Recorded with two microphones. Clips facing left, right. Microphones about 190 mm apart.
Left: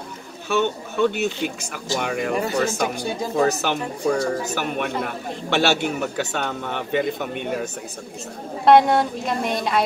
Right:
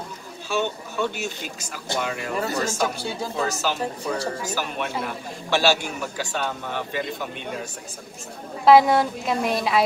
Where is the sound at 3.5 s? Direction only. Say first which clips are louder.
Left 3 dB; 60° left (ahead or behind).